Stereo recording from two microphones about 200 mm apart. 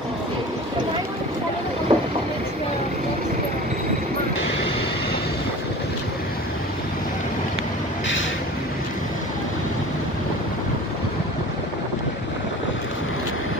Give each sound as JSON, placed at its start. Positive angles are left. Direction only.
{"t": 1.9, "sound": "vehicle", "side_deg": -20}